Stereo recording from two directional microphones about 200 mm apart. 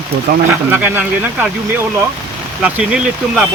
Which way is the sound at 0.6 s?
10° right (ahead or behind).